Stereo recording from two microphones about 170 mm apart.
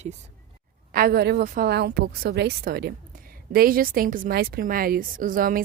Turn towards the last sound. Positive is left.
turn(degrees=-55)  # may be behind; listen again after turning